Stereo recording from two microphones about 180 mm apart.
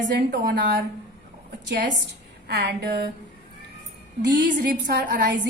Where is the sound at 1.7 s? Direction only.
70° right (ahead or behind).